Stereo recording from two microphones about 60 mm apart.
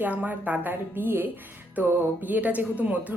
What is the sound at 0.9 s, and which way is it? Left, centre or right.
A woman's voice, right.